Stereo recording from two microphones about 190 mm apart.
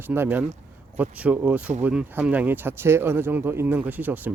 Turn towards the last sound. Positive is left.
turn(degrees=-10)  # may be behind; listen again after turning